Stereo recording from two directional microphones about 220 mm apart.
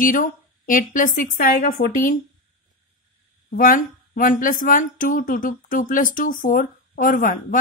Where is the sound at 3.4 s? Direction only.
40° left (ahead or behind).